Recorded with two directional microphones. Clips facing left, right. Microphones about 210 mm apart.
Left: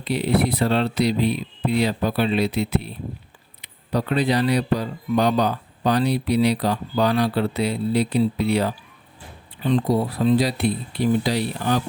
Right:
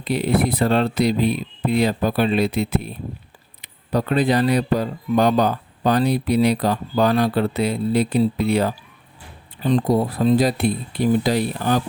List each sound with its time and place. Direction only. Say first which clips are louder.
0.0 s speech: right 1 dB; 50° right (ahead or behind)